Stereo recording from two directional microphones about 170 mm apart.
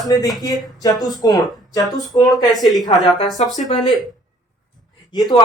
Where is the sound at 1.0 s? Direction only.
Centre (ahead or behind).